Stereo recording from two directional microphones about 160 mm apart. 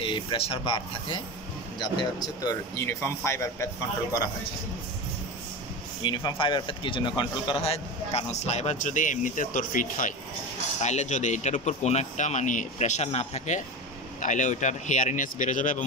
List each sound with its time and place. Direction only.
0.0 s speech: 30° left (ahead or behind); by 3.6 s 15° left (ahead or behind)
6.0 s a man's voice: 30° left (ahead or behind); by 15.8 s 55° left (ahead or behind)